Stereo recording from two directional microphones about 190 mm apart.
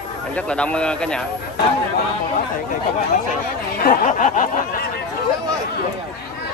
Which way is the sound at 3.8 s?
45° left (ahead or behind).